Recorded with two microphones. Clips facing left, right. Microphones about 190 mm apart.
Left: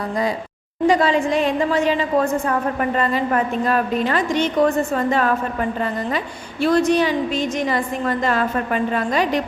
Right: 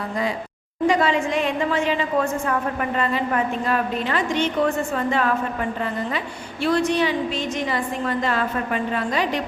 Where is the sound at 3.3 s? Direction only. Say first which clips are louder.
Left 3 dB; 40° left (ahead or behind).